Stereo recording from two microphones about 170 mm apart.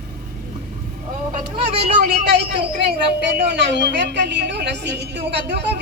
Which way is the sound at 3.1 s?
90° right.